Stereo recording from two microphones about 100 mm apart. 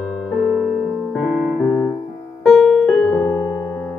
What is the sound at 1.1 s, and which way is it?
Music, centre (ahead or behind).